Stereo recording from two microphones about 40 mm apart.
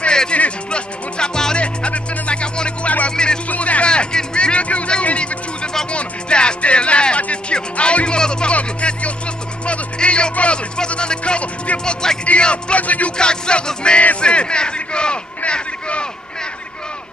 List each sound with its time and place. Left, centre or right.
0.0 s music: left
1.6 s music: left
3.4 s a sound: left
3.9 s music: left
8.2 s speech: left
8.5 s music: left
9.7 s a sound: left
10.9 s music: left
11.8 s music: centre
12.7 s speech: left
13.2 s music: left
14.2 s a sound: left